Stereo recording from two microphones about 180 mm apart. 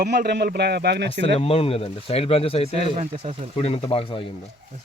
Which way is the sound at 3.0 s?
35° right (ahead or behind).